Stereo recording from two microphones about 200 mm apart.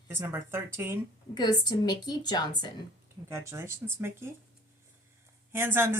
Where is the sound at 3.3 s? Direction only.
15° right (ahead or behind).